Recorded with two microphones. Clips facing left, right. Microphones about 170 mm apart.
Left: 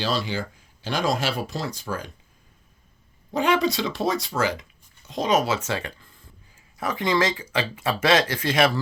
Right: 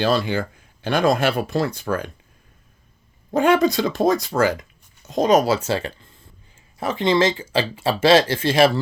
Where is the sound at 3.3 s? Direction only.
50° right (ahead or behind).